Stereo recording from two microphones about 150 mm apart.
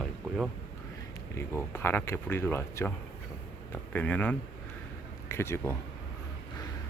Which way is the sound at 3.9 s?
10° left (ahead or behind).